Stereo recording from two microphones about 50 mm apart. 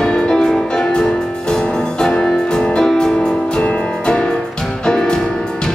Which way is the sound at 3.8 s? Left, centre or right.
Centre.